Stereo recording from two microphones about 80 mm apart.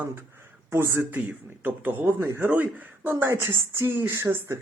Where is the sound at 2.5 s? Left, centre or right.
Right.